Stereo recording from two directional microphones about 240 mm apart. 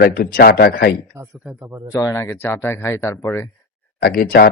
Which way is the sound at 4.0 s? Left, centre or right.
Left.